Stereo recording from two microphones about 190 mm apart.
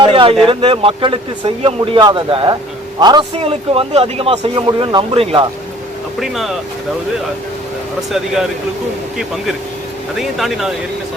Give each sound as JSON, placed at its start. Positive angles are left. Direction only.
{"t": 0.0, "sound": "a sound", "side_deg": -25}
{"t": 0.4, "sound": "speech", "side_deg": -30}
{"t": 6.1, "sound": "speech", "side_deg": 0}
{"t": 10.2, "sound": "speech", "side_deg": 0}